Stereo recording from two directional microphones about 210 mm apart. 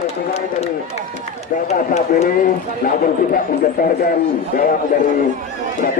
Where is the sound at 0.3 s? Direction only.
30° left (ahead or behind).